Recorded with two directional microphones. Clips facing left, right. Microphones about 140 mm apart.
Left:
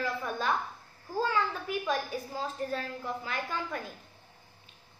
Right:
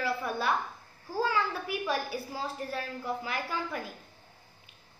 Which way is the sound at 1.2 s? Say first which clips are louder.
Right 1 dB; 10° right (ahead or behind).